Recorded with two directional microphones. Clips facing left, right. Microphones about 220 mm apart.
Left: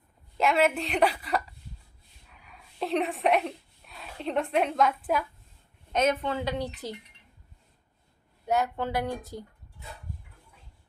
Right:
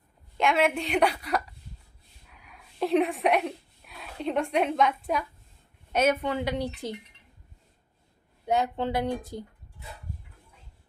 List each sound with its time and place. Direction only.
0.3 s a woman's voice: 5° left (ahead or behind)
2.5 s a woman's voice: centre (ahead or behind)
5.9 s speech: 10° right (ahead or behind)
8.4 s speech: 15° right (ahead or behind)